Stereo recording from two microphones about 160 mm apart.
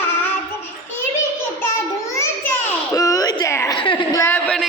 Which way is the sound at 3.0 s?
20° left (ahead or behind).